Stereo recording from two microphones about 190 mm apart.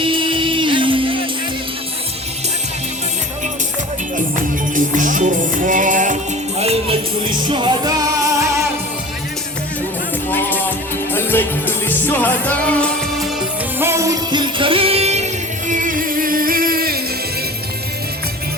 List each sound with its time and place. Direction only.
0.0 s music: 25° right (ahead or behind)
4.7 s music: 45° right (ahead or behind)
6.6 s music: 30° right (ahead or behind)
10.2 s music: 10° left (ahead or behind)
13.7 s music: 15° right (ahead or behind); by 17.0 s 50° right (ahead or behind)